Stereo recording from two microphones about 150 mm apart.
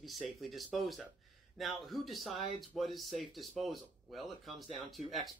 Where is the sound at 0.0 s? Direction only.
Centre (ahead or behind).